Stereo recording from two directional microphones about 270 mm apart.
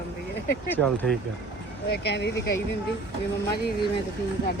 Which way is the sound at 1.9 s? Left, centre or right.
Left.